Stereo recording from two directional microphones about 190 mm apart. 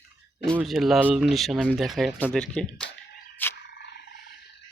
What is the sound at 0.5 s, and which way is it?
Speech, centre (ahead or behind).